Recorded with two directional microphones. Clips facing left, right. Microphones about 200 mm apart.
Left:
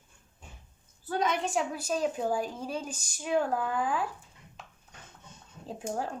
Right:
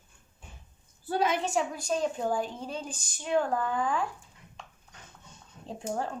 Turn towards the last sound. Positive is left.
turn(degrees=0)  # may be behind; listen again after turning